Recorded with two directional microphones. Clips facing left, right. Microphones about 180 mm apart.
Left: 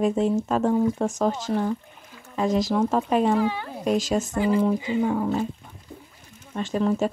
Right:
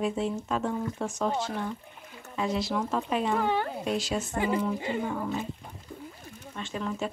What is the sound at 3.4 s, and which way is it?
Speech, 55° right (ahead or behind).